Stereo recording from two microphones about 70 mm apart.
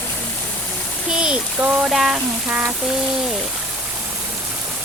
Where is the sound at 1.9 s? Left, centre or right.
Centre.